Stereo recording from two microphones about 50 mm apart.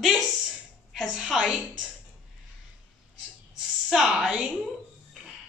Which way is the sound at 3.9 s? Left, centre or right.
Centre.